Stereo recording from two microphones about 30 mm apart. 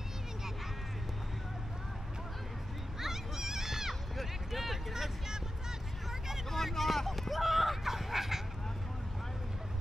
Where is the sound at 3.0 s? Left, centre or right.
Centre.